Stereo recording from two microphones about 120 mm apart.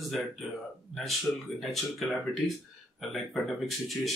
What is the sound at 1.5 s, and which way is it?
Speech, centre (ahead or behind).